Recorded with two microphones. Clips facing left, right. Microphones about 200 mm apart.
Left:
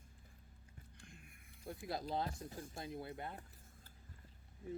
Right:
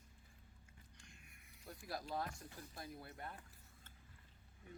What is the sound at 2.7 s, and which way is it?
Speech, 25° left (ahead or behind).